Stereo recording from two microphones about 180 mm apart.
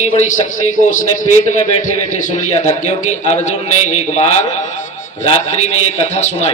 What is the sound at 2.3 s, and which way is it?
A man's voice, 40° left (ahead or behind).